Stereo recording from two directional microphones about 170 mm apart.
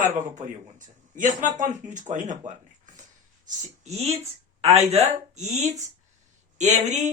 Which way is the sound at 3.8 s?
40° right (ahead or behind).